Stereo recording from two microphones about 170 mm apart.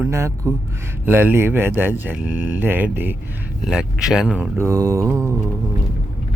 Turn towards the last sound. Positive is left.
turn(degrees=-15)  # may be behind; listen again after turning